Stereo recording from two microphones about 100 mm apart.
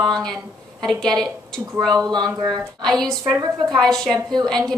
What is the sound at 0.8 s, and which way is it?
A woman's voice, 5° left (ahead or behind).